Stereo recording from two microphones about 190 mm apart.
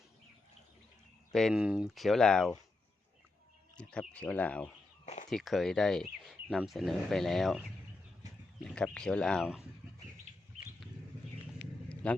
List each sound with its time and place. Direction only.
1.3 s speech: centre (ahead or behind)
3.8 s speech: 5° left (ahead or behind)
5.0 s a sound: 40° left (ahead or behind)
5.3 s speech: centre (ahead or behind)
8.6 s speech: 5° left (ahead or behind)
12.0 s speech: 5° left (ahead or behind)